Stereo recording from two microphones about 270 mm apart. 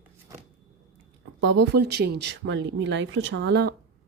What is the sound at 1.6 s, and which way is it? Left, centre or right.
Speech, right.